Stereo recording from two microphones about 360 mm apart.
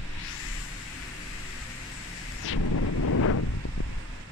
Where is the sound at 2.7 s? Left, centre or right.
Left.